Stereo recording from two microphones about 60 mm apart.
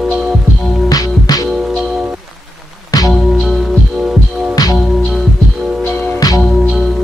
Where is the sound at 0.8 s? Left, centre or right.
Left.